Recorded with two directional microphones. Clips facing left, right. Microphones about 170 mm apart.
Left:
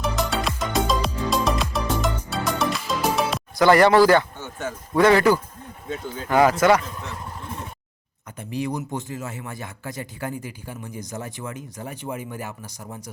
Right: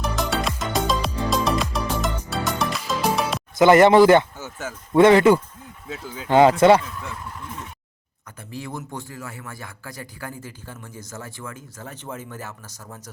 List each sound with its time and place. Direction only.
0.0 s music: centre (ahead or behind)
3.6 s speech: 20° right (ahead or behind)
4.4 s speech: 5° right (ahead or behind)
4.9 s speech: 25° right (ahead or behind)
8.4 s speech: 20° left (ahead or behind)